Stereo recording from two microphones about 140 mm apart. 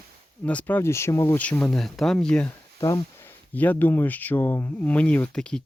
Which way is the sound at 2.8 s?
20° left (ahead or behind).